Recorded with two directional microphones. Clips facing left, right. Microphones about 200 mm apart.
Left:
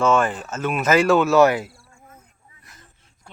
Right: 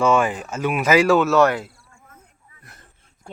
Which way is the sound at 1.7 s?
30° left (ahead or behind).